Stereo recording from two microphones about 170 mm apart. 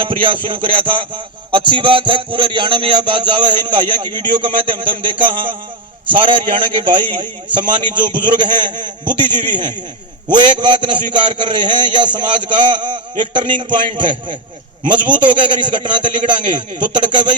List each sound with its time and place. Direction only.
0.0 s a man's voice: 30° right (ahead or behind)
0.4 s music: 30° right (ahead or behind)
6.1 s a man's voice: 30° right (ahead or behind)
7.5 s music: 30° right (ahead or behind)